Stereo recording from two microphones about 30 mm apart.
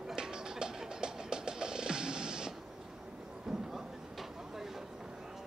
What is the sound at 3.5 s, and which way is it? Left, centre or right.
Vehicle, centre.